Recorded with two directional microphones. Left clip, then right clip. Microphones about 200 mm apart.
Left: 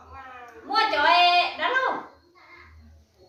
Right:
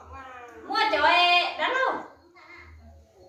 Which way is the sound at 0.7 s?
10° left (ahead or behind).